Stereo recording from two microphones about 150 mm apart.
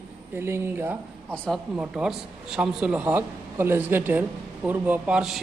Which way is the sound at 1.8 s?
5° right (ahead or behind).